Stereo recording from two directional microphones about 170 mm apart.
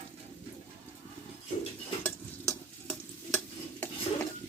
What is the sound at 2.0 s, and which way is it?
Stir, 10° left (ahead or behind).